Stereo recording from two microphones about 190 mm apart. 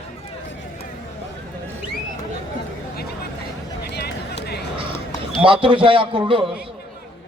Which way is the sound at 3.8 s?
60° left (ahead or behind).